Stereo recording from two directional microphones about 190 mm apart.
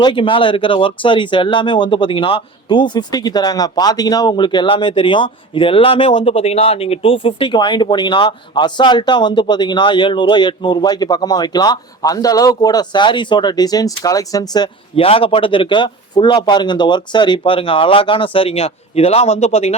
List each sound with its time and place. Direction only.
0.0 s speech: 25° left (ahead or behind)